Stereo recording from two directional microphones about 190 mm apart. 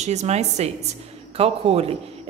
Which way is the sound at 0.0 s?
35° right (ahead or behind).